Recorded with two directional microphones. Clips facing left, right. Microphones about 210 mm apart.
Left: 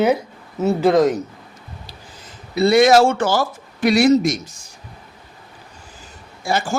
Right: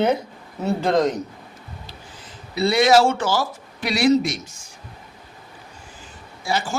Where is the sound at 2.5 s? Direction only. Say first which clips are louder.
Left 4 dB; 50° left (ahead or behind).